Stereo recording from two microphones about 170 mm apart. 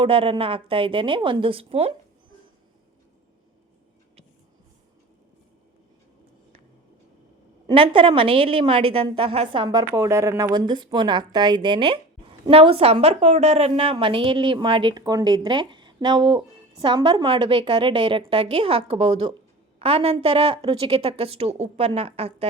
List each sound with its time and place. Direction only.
0.0 s a woman's voice: 30° right (ahead or behind)
7.7 s a woman's voice: 30° right (ahead or behind)